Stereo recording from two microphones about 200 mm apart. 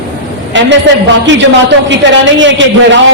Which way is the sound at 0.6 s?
65° right (ahead or behind).